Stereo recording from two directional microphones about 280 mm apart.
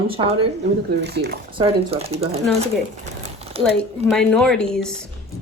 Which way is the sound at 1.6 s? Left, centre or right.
Right.